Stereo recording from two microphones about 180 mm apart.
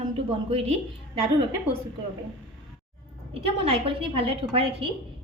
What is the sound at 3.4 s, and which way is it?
A woman's voice, 30° right (ahead or behind).